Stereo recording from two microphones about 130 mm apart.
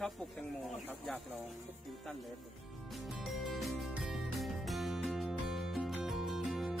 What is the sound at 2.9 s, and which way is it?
Music, centre (ahead or behind).